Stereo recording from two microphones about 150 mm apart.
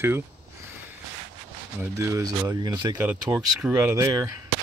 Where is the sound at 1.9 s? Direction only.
20° right (ahead or behind).